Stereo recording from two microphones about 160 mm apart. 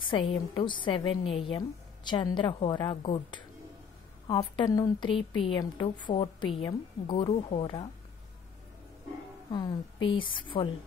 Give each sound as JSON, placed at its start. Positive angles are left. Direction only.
{"t": 0.0, "sound": "a woman's voice", "side_deg": 35}
{"t": 4.6, "sound": "a woman's voice", "side_deg": 25}
{"t": 9.5, "sound": "a woman's voice", "side_deg": 30}